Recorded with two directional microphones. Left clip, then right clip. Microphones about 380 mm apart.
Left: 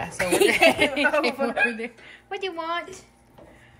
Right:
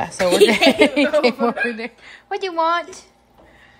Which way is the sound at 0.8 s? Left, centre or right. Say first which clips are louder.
Right 6 dB; centre.